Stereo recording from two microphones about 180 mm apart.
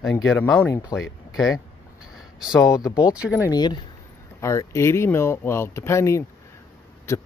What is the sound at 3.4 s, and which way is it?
Speech, 20° left (ahead or behind).